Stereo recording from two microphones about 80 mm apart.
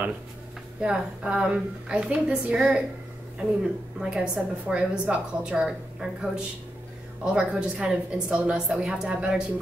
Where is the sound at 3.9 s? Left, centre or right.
Centre.